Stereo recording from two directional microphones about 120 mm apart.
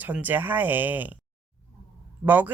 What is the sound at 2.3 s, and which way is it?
Speech, 15° right (ahead or behind).